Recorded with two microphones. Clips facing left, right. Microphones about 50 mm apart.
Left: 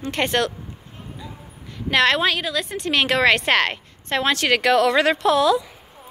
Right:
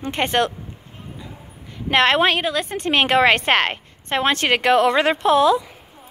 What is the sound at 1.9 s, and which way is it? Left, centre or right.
A woman's voice, right.